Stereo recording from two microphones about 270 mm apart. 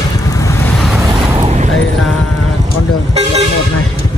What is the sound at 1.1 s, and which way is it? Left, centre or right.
Vehicle, centre.